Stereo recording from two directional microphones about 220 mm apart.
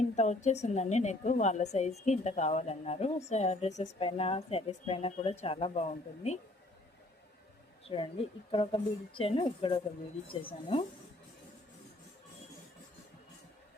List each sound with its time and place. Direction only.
0.2 s a woman's voice: 30° left (ahead or behind)
7.9 s a woman's voice: 25° left (ahead or behind)